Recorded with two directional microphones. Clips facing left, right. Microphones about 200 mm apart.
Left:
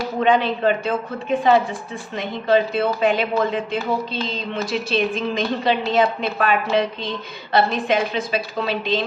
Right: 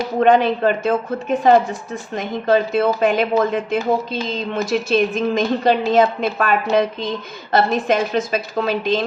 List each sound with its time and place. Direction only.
0.2 s speech: 45° right (ahead or behind)